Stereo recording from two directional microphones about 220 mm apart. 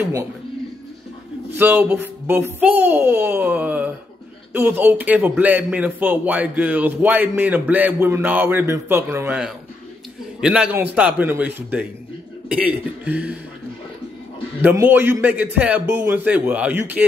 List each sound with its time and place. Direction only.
1.5 s a man's voice: 10° right (ahead or behind)
14.6 s a man's voice: 10° right (ahead or behind)